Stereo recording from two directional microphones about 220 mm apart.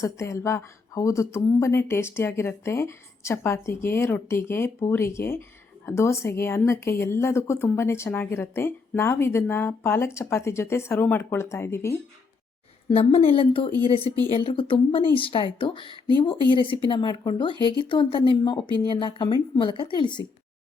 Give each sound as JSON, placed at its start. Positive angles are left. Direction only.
{"t": 0.0, "sound": "speech", "side_deg": 15}
{"t": 12.9, "sound": "a woman's voice", "side_deg": 25}
{"t": 17.5, "sound": "speech", "side_deg": -20}
{"t": 17.8, "sound": "a woman's voice", "side_deg": 20}